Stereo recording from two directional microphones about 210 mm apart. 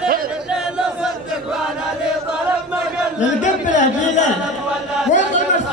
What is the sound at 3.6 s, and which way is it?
Speech, 35° left (ahead or behind).